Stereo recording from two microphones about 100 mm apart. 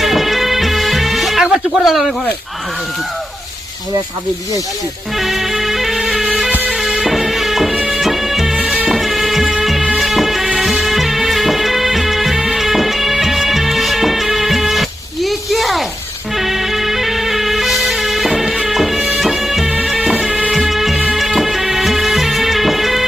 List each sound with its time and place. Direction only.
0.0 s music: centre (ahead or behind)
5.1 s music: centre (ahead or behind)
6.5 s music: 15° right (ahead or behind)
6.7 s music: 5° right (ahead or behind)